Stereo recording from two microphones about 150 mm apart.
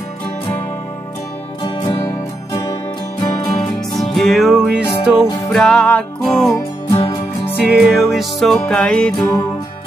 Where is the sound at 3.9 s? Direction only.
Centre (ahead or behind).